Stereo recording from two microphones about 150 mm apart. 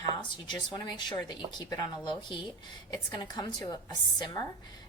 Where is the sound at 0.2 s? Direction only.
30° left (ahead or behind).